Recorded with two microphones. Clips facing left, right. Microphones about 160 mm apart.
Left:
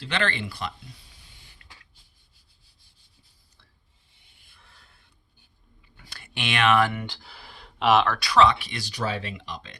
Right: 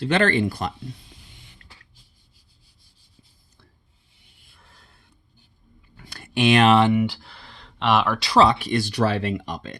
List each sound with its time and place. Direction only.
0.0 s speech: 45° right (ahead or behind)
6.0 s a sound: 45° right (ahead or behind)
6.9 s speech: 5° right (ahead or behind)
8.2 s speech: 35° right (ahead or behind)